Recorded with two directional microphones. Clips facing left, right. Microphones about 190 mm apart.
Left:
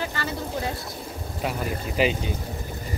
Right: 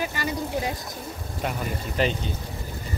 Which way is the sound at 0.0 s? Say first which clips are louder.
Right 1 dB; 15° right (ahead or behind).